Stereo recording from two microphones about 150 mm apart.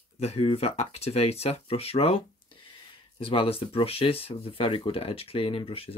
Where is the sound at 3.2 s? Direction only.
40° left (ahead or behind).